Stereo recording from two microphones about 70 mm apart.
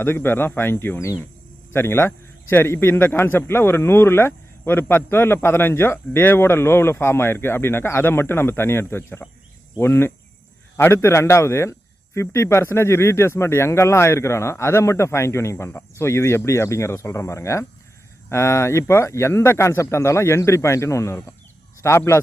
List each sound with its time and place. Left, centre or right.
0.0 s a man's voice: left